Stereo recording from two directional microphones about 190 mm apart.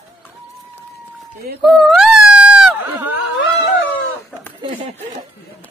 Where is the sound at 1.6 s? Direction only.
Centre (ahead or behind).